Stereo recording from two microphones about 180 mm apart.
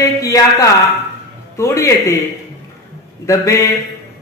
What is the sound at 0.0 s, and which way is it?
A man's voice, 20° left (ahead or behind).